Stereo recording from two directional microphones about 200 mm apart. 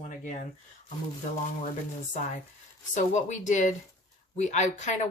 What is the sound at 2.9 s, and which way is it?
Speech, 35° left (ahead or behind).